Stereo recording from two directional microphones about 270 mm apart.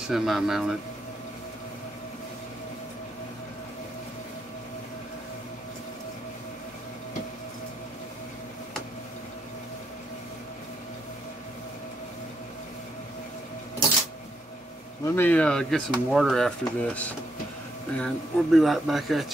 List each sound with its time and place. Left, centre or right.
0.1 s speech: centre
15.0 s speech: centre